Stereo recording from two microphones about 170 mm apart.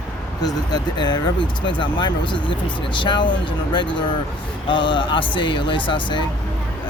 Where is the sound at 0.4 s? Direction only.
25° left (ahead or behind).